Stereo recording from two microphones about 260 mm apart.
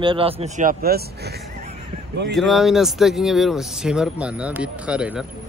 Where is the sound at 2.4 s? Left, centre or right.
Centre.